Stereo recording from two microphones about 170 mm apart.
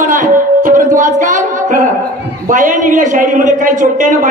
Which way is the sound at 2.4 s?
50° right (ahead or behind).